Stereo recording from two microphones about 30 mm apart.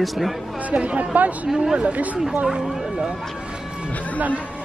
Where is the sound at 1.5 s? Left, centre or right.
Right.